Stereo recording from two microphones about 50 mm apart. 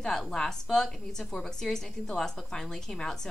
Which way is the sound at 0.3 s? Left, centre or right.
Centre.